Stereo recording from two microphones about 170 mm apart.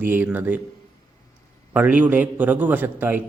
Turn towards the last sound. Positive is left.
turn(degrees=-10)  # may be behind; listen again after turning